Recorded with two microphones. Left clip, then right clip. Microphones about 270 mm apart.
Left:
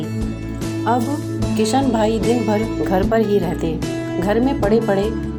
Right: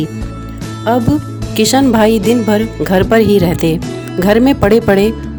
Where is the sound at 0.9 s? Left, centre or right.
Right.